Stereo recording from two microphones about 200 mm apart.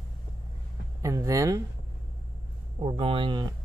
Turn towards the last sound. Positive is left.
turn(degrees=-25)  # may be behind; listen again after turning